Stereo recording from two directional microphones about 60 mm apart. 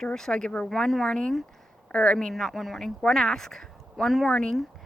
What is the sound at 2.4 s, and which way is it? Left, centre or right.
Speech, centre.